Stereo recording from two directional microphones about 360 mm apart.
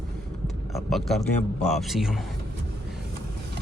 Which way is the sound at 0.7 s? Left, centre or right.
Centre.